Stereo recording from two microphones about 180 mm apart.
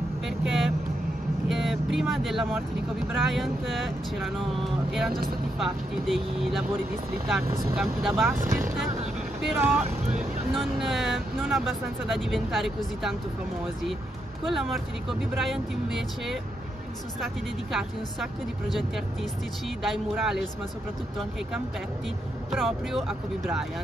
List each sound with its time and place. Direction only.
0.5 s speech: centre (ahead or behind)
7.7 s speech: centre (ahead or behind)
9.6 s speech: 10° right (ahead or behind)
10.5 s speech: centre (ahead or behind)
14.5 s speech: centre (ahead or behind)
22.5 s speech: centre (ahead or behind)